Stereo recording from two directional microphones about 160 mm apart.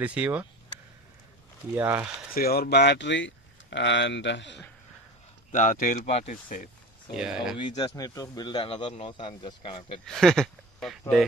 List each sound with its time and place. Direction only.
0.0 s speech: 10° right (ahead or behind)
1.8 s speech: 10° right (ahead or behind)
2.3 s speech: 70° left (ahead or behind); by 4.6 s 90° left
5.5 s speech: 50° left (ahead or behind)
6.3 s speech: 55° left (ahead or behind)
7.2 s speech: 5° right (ahead or behind)
7.5 s speech: 30° left (ahead or behind)
7.9 s speech: 20° left (ahead or behind)
10.0 s speech: 5° left (ahead or behind)